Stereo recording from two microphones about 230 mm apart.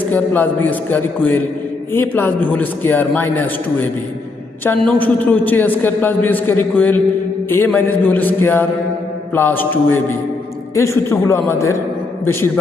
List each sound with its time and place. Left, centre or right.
0.1 s a man's voice: centre